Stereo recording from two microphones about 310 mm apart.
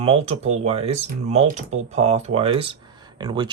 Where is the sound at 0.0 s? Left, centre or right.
Centre.